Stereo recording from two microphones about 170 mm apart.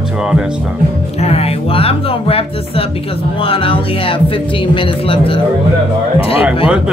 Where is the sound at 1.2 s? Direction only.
35° left (ahead or behind).